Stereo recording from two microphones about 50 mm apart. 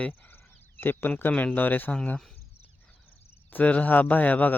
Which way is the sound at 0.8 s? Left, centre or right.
Left.